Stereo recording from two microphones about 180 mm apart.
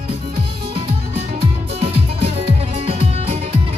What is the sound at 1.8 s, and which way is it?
Music, 35° right (ahead or behind).